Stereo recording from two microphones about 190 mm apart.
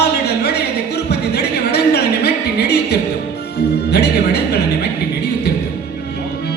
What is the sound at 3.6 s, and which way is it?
Music, 60° left (ahead or behind).